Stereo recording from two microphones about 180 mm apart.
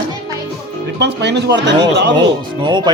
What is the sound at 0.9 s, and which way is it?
Speech, 75° right (ahead or behind).